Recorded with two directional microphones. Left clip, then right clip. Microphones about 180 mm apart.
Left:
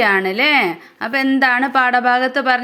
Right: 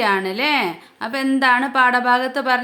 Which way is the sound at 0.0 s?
15° left (ahead or behind).